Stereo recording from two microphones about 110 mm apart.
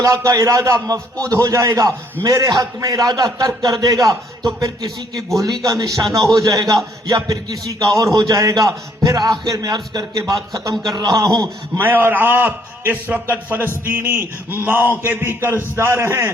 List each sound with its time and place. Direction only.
0.0 s a man's voice: 30° right (ahead or behind)
11.8 s a man's voice: 20° right (ahead or behind)